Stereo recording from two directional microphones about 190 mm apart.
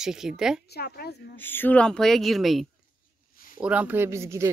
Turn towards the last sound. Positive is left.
turn(degrees=-15)  # may be behind; listen again after turning